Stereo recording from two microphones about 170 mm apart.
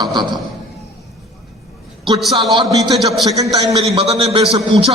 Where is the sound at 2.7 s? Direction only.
20° right (ahead or behind).